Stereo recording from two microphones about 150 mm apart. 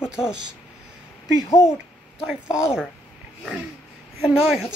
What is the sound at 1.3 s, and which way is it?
Speech, 20° left (ahead or behind).